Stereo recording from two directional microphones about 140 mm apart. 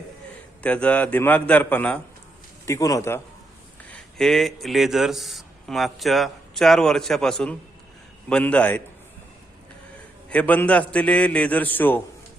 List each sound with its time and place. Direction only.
0.6 s a man's voice: 10° left (ahead or behind)
2.6 s a man's voice: 25° left (ahead or behind)
3.9 s a man's voice: 5° left (ahead or behind)
10.2 s a man's voice: 10° left (ahead or behind)